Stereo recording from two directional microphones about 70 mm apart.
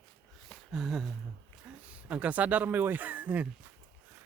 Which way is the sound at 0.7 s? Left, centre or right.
Centre.